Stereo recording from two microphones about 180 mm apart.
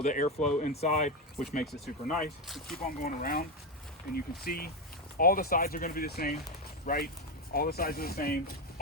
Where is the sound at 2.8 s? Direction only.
50° left (ahead or behind).